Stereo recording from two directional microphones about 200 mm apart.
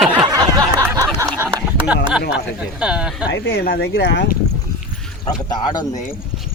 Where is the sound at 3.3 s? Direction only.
70° left (ahead or behind).